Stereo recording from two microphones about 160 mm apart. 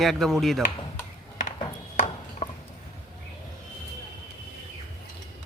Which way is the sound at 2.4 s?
45° left (ahead or behind).